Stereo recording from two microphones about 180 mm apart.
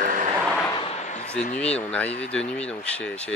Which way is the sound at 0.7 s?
30° left (ahead or behind).